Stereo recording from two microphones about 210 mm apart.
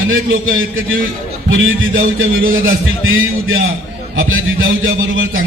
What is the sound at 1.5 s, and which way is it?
A man's voice, 70° right (ahead or behind).